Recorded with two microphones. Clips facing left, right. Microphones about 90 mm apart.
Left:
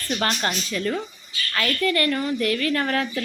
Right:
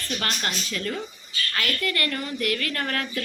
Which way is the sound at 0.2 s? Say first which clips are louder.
Left 6 dB; 30° left (ahead or behind).